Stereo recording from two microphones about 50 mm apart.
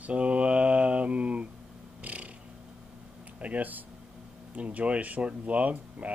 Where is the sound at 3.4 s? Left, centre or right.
Right.